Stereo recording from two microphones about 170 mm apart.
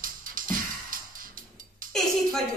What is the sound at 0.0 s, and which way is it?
Music, 55° right (ahead or behind).